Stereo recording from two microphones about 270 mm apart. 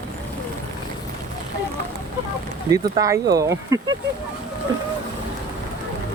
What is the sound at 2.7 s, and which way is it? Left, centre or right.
Speech, centre.